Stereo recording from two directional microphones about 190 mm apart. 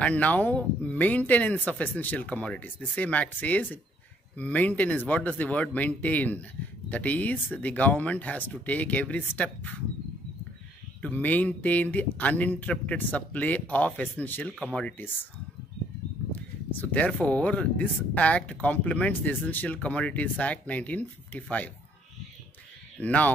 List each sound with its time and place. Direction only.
0.0 s speech: 10° left (ahead or behind)
11.0 s speech: 10° left (ahead or behind)
16.3 s speech: 10° left (ahead or behind)
22.9 s speech: 10° left (ahead or behind)